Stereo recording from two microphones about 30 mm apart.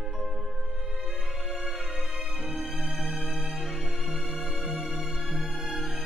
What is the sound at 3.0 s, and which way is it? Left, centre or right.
Music, right.